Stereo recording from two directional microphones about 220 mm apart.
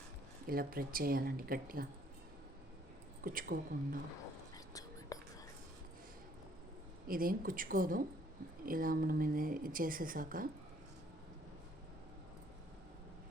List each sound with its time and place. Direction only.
0.4 s speech: 40° right (ahead or behind)
3.2 s speech: 40° right (ahead or behind)
4.5 s whispering: 15° left (ahead or behind)
7.1 s speech: 40° right (ahead or behind)